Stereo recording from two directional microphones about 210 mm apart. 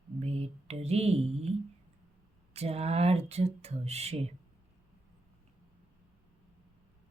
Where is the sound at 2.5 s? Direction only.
30° right (ahead or behind).